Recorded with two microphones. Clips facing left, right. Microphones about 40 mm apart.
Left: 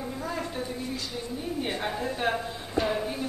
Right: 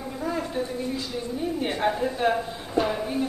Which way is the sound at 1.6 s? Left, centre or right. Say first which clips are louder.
Right 6 dB; centre.